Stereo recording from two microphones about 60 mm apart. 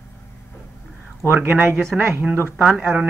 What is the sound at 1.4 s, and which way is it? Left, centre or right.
Speech, right.